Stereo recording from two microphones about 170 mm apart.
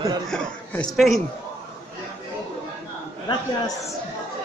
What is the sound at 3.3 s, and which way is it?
Speech, 20° left (ahead or behind).